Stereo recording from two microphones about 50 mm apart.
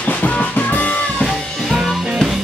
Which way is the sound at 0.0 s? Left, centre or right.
Left.